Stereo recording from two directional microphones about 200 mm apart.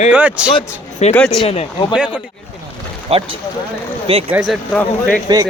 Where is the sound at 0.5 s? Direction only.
30° left (ahead or behind).